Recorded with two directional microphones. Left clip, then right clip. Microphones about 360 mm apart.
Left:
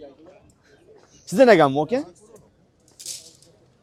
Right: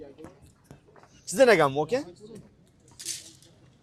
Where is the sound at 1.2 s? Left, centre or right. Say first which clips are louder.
Left 5 dB; left.